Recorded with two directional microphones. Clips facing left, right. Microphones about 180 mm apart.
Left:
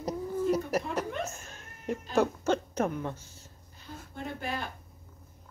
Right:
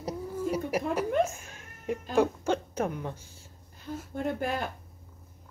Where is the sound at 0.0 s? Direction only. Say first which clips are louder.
Left 2 dB; 10° right (ahead or behind).